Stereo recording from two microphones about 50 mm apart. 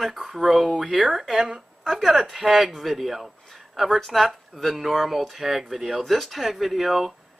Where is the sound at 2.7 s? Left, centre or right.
Centre.